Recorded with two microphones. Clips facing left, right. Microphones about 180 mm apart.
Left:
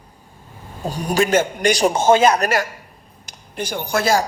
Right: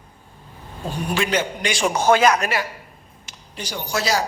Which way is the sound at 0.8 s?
40° left (ahead or behind).